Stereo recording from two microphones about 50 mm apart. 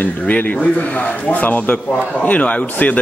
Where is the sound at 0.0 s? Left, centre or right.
Left.